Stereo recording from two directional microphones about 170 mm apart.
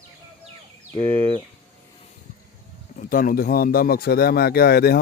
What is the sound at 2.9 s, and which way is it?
Speech, 55° left (ahead or behind).